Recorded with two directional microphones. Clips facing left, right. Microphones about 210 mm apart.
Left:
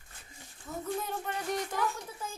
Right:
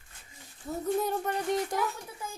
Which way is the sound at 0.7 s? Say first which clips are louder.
Right 4 dB; 35° right (ahead or behind).